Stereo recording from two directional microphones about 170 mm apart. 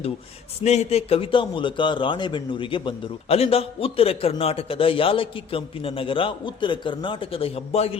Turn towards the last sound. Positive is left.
turn(degrees=35)  # may be behind; listen again after turning